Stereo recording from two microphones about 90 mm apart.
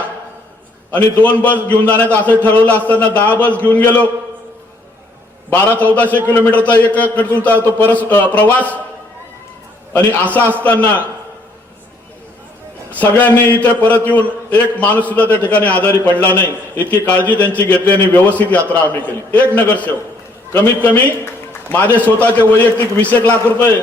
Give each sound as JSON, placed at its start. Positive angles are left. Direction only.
{"t": 0.9, "sound": "a man's voice", "side_deg": 15}
{"t": 5.5, "sound": "a man's voice", "side_deg": 20}
{"t": 10.2, "sound": "a man's voice", "side_deg": 15}
{"t": 12.9, "sound": "a man's voice", "side_deg": 20}